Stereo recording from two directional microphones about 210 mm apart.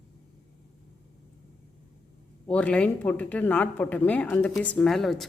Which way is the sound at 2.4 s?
5° left (ahead or behind).